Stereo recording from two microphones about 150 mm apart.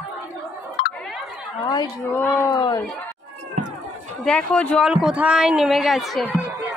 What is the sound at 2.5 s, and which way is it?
Speech, 30° left (ahead or behind).